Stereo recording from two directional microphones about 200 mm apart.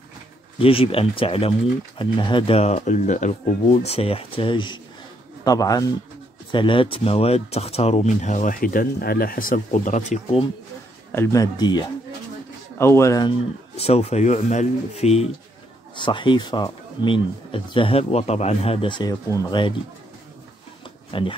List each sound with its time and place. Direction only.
0.6 s speech: 25° left (ahead or behind)
11.1 s a man's voice: 15° left (ahead or behind)
13.7 s speech: 30° left (ahead or behind)
21.1 s speech: 25° left (ahead or behind)